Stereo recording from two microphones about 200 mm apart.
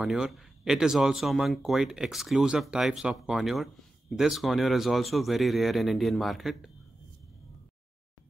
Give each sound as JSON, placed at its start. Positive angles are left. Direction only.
{"t": 0.0, "sound": "speech", "side_deg": 0}